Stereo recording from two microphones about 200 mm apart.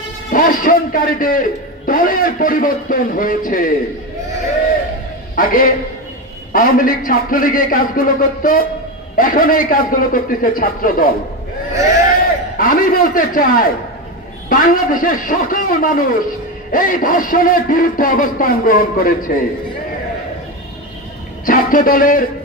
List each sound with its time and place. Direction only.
0.3 s a man's voice: 45° left (ahead or behind)
5.3 s a man's voice: 45° left (ahead or behind)
12.5 s a man's voice: 45° left (ahead or behind)
21.5 s a man's voice: 45° left (ahead or behind)